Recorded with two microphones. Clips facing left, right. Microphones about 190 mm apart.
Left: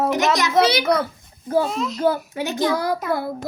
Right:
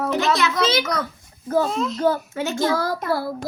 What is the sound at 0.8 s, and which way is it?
Speech, 30° left (ahead or behind).